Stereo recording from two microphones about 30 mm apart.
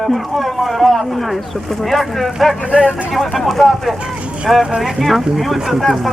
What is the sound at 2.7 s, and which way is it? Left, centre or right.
Speech, right.